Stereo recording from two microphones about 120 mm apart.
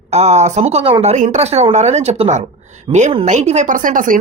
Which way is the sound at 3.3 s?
80° right.